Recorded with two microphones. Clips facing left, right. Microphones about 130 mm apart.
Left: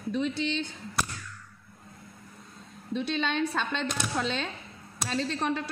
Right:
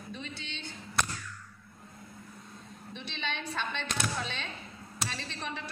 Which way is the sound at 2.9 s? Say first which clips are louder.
Left 11 dB; 90° left.